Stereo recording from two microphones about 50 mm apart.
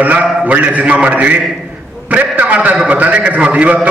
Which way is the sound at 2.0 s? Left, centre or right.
Right.